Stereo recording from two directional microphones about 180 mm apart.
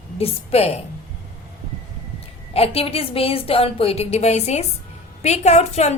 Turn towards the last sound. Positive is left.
turn(degrees=40)  # may be behind; listen again after turning